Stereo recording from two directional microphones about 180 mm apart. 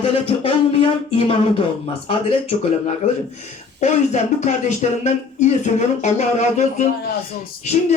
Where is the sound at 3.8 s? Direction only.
40° left (ahead or behind).